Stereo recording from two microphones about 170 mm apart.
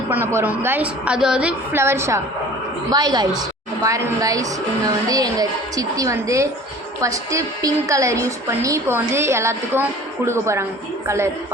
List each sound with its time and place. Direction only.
0.1 s a woman's voice: 15° right (ahead or behind)